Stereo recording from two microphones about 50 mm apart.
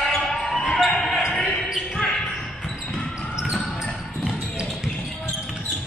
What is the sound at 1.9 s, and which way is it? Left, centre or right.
Basketball bounce, centre.